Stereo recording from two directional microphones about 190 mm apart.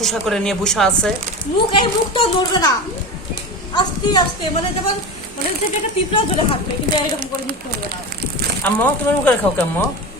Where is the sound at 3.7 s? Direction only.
20° left (ahead or behind).